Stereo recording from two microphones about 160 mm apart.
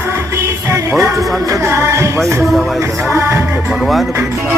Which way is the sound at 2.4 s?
Centre (ahead or behind).